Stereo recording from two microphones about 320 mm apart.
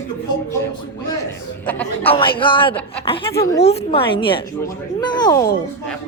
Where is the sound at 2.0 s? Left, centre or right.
Centre.